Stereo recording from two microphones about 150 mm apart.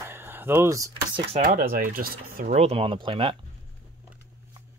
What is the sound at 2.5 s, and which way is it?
Speech, 45° right (ahead or behind).